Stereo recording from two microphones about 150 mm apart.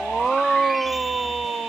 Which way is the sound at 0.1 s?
Centre (ahead or behind).